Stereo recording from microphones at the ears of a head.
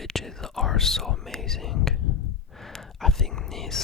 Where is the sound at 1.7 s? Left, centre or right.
Left.